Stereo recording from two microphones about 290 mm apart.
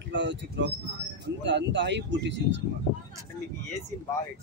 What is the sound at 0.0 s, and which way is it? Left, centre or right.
Speech, right.